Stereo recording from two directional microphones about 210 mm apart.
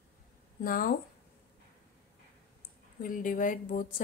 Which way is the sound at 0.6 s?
40° left (ahead or behind).